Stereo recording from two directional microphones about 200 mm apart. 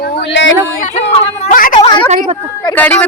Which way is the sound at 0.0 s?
55° left (ahead or behind).